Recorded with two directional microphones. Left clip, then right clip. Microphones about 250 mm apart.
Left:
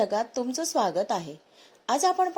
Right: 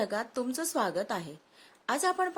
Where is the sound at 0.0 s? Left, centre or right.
Centre.